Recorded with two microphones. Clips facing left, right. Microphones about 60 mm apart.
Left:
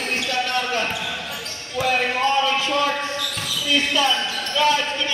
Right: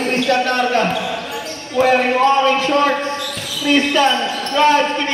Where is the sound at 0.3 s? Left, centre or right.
Right.